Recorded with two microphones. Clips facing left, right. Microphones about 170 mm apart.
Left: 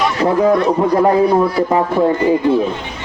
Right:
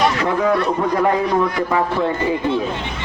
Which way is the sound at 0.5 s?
15° left (ahead or behind).